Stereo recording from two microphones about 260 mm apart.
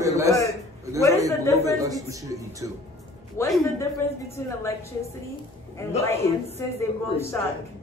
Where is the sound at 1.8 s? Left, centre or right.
Centre.